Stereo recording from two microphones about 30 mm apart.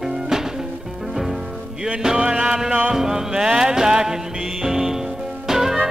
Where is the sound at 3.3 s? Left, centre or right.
Right.